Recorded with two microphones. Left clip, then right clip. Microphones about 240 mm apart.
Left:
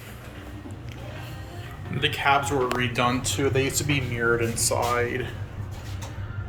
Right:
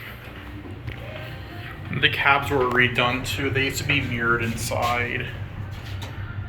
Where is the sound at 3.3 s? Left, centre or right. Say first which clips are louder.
Even; left.